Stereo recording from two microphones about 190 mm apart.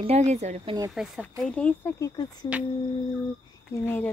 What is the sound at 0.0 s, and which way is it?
Speech, 35° right (ahead or behind).